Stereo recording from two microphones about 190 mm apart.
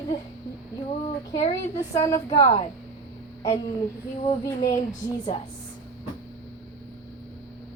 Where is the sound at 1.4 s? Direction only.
35° left (ahead or behind).